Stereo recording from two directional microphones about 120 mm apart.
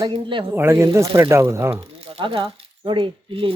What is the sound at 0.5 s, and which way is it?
Speech, 20° right (ahead or behind).